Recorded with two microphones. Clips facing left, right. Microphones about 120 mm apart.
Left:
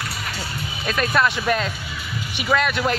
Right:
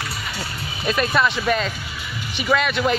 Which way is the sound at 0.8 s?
5° right (ahead or behind).